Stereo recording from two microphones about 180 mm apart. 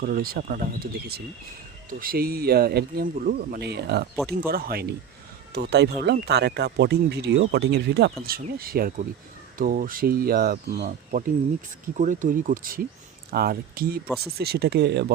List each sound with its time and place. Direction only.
0.0 s speech: 55° right (ahead or behind)
8.2 s speech: 55° right (ahead or behind)
11.9 s speech: 45° right (ahead or behind); by 15.1 s 65° right (ahead or behind)